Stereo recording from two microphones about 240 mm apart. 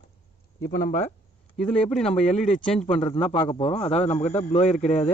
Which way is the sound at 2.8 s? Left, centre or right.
Left.